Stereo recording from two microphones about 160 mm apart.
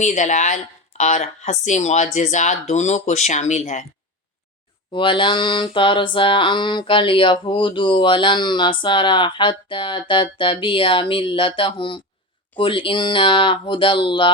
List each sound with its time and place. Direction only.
0.0 s speech: 50° left (ahead or behind)
4.9 s mantra: 30° left (ahead or behind)